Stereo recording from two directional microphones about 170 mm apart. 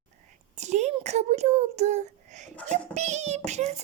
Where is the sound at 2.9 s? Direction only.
40° right (ahead or behind).